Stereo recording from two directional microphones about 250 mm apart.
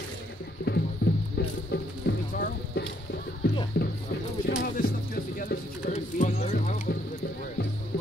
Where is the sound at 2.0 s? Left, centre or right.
Left.